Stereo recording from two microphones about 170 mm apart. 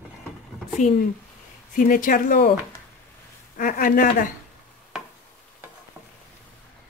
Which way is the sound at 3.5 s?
55° left (ahead or behind).